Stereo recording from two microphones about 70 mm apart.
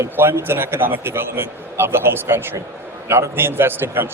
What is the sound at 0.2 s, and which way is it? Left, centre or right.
Speech, right.